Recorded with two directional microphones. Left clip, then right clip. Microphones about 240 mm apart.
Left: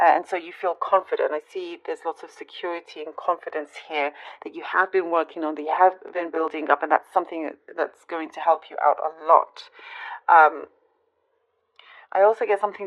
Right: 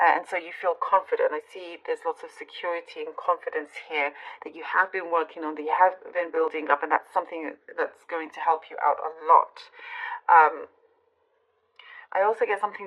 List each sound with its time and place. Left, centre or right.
0.0 s speech: left
11.8 s speech: left